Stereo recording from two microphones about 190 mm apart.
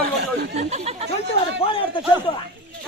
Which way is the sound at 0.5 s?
35° right (ahead or behind).